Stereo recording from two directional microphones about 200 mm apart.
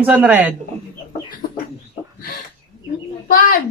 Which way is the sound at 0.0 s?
10° right (ahead or behind).